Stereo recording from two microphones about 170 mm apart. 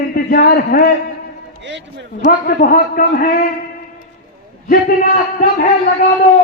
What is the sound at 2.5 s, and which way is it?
Speech, 60° left (ahead or behind).